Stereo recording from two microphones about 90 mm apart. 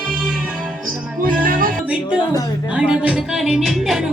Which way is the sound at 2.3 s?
45° left (ahead or behind).